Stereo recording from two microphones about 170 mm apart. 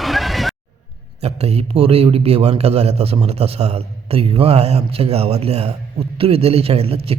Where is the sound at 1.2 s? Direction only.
35° right (ahead or behind).